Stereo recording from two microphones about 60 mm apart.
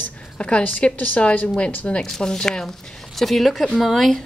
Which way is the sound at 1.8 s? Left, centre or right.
Centre.